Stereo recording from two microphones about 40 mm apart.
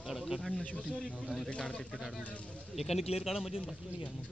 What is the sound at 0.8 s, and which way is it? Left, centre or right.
Speech, left.